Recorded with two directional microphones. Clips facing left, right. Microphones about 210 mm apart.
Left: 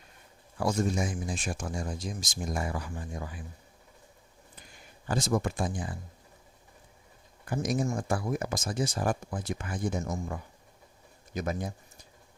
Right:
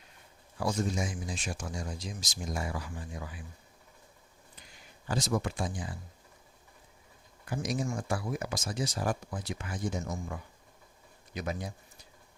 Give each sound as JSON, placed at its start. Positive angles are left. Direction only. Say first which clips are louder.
{"t": 0.6, "sound": "speech", "louder": "left 3 dB", "side_deg": 50}
{"t": 5.0, "sound": "speech", "louder": "left 3 dB", "side_deg": 50}
{"t": 7.4, "sound": "speech", "louder": "left 4 dB", "side_deg": 50}
{"t": 11.3, "sound": "speech", "louder": "left 3 dB", "side_deg": 50}